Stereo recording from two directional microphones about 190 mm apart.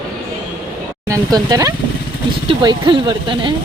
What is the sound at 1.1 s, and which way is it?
Speech, 20° right (ahead or behind).